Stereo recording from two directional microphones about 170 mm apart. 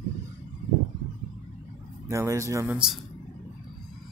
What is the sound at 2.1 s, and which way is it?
Speech, 15° right (ahead or behind).